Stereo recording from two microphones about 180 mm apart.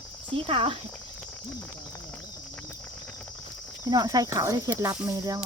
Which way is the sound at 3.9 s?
20° right (ahead or behind).